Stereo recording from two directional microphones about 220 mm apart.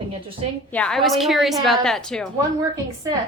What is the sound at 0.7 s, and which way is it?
A woman's voice, 5° left (ahead or behind).